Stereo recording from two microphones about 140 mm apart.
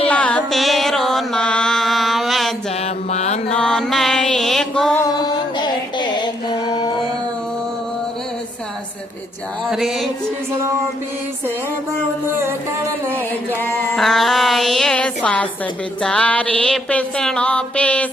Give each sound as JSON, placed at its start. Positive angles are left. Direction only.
{"t": 0.1, "sound": "mantra", "side_deg": 10}
{"t": 2.8, "sound": "mantra", "side_deg": 50}
{"t": 3.5, "sound": "music", "side_deg": 5}
{"t": 4.9, "sound": "music", "side_deg": 25}
{"t": 9.6, "sound": "music", "side_deg": 0}
{"t": 10.5, "sound": "music", "side_deg": -20}
{"t": 12.3, "sound": "music", "side_deg": -15}
{"t": 13.9, "sound": "a sound", "side_deg": 0}
{"t": 16.0, "sound": "music", "side_deg": 5}